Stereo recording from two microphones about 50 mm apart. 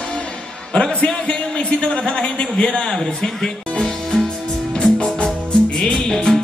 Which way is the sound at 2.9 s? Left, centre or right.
Centre.